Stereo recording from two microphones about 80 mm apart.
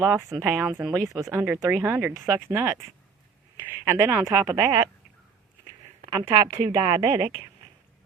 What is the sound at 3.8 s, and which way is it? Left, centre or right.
A woman's voice, right.